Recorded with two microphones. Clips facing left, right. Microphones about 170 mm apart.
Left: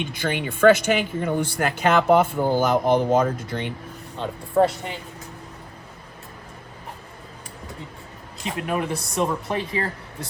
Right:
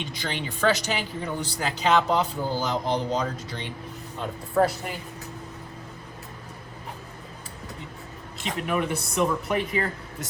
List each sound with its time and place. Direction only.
0.0 s speech: 55° left (ahead or behind)
4.6 s speech: 20° left (ahead or behind)
8.6 s speech: 35° left (ahead or behind)